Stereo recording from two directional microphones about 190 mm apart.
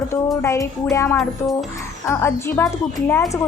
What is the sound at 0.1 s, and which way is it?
A woman's voice, 15° left (ahead or behind).